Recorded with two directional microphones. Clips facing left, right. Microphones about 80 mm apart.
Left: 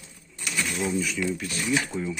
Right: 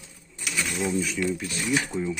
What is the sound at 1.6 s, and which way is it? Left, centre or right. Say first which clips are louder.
Speech: left 1 dB; right.